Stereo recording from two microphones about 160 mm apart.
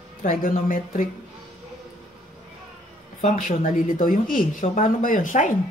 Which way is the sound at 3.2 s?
55° left (ahead or behind).